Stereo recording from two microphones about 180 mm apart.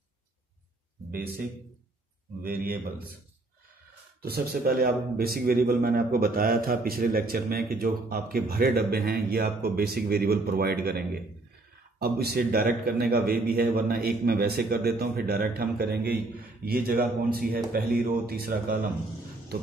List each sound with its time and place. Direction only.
2.4 s a man's voice: 55° right (ahead or behind)
4.2 s a man's voice: 60° right (ahead or behind)